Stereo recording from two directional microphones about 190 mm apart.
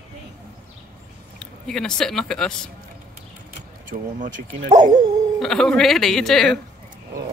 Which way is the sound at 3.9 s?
45° right (ahead or behind).